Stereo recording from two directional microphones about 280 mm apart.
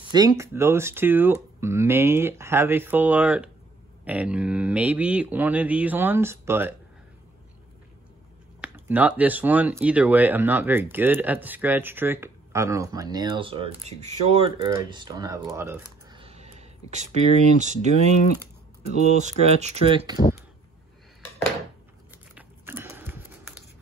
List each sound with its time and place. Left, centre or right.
0.1 s speech: centre
8.5 s speech: centre
22.3 s biting: centre